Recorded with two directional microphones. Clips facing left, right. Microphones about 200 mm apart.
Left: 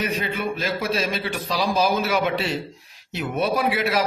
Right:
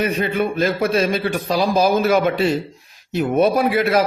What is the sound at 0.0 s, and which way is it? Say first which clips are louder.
A man's voice: right 6 dB; 55° right (ahead or behind).